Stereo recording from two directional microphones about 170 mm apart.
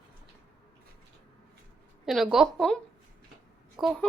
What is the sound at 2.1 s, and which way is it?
Speech, centre (ahead or behind).